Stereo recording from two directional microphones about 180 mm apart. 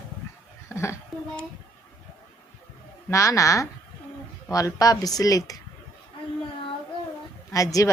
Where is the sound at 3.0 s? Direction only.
15° left (ahead or behind).